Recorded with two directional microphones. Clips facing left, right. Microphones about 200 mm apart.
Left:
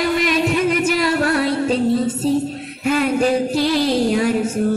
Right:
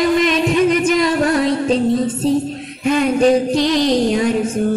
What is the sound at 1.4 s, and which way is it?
Music, 5° left (ahead or behind).